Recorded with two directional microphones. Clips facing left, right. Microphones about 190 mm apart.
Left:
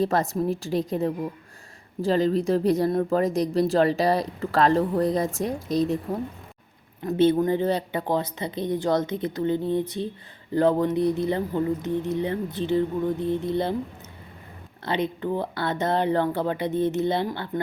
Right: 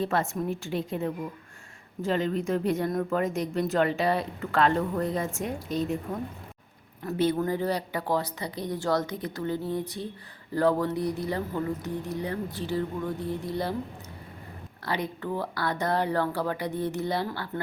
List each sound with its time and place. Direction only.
0.0 s speech: 40° left (ahead or behind)
7.0 s speech: 25° left (ahead or behind)
14.8 s speech: 25° left (ahead or behind)